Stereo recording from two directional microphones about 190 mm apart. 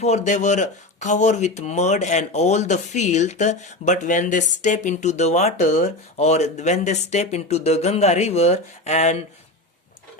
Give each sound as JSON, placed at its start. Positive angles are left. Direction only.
{"t": 0.0, "sound": "speech", "side_deg": 40}